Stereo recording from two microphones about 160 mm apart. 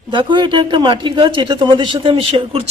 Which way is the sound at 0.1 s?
30° right (ahead or behind).